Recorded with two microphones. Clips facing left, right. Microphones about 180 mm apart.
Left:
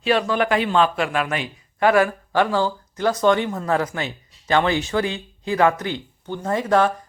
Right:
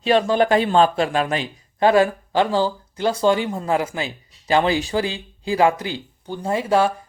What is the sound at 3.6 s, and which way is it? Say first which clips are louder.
Speech: even; 10° right (ahead or behind).